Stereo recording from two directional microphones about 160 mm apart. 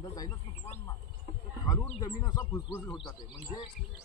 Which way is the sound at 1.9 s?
25° left (ahead or behind).